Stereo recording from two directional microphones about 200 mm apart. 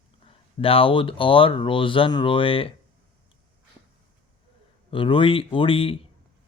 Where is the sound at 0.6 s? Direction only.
25° left (ahead or behind).